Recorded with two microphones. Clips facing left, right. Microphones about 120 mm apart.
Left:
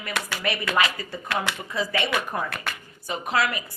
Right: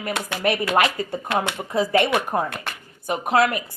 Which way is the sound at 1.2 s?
25° right (ahead or behind).